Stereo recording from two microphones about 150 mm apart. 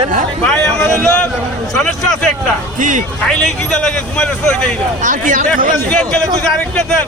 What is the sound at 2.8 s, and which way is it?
Speech, 55° right (ahead or behind).